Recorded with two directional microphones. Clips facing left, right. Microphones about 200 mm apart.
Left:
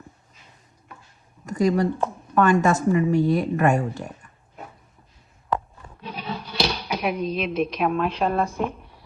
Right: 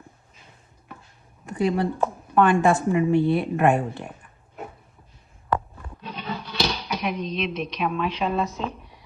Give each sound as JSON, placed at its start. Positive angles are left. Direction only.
{"t": 1.5, "sound": "a woman's voice", "side_deg": 40}
{"t": 6.1, "sound": "speech", "side_deg": 10}